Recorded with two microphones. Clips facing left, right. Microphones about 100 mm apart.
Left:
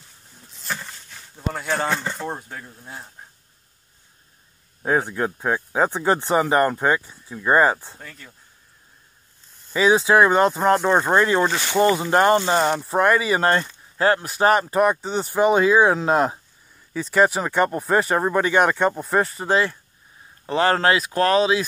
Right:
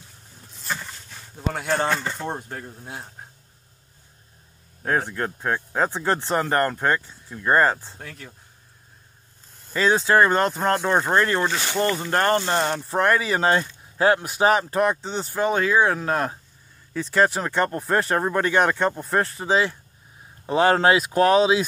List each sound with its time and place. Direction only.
1.5 s speech: centre (ahead or behind)
4.8 s speech: 10° left (ahead or behind)
9.7 s speech: 10° left (ahead or behind); by 14.4 s 15° right (ahead or behind)
14.4 s speech: centre (ahead or behind)
15.4 s speech: 15° left (ahead or behind)
16.9 s speech: 5° left (ahead or behind)
20.4 s speech: 15° right (ahead or behind)